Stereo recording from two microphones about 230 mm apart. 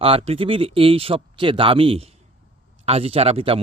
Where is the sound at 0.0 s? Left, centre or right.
Right.